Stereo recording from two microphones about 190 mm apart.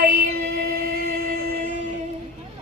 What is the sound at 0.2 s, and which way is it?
Music, 55° right (ahead or behind).